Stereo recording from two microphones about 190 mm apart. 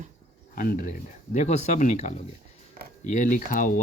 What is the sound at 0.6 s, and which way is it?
Speech, 45° left (ahead or behind).